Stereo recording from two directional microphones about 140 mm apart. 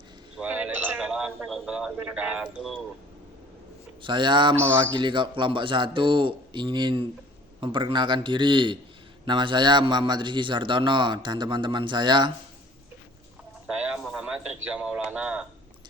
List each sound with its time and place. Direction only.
0.3 s a man's voice: 10° right (ahead or behind)
4.0 s a man's voice: 35° right (ahead or behind)
13.7 s a sound: 5° right (ahead or behind)